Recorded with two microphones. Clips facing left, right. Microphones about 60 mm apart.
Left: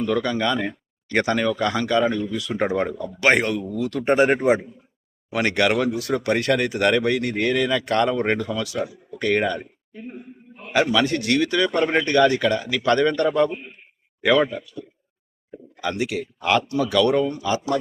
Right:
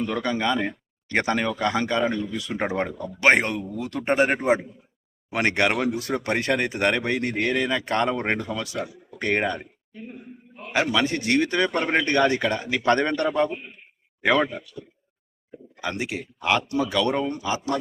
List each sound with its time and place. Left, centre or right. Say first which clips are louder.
0.1 s speech: left 4 dB; centre
4.0 s speech: left 3 dB; centre
5.3 s speech: left 2 dB; right
10.7 s speech: left 3 dB; centre
11.2 s speech: left 1 dB; right
15.8 s speech: left 4 dB; right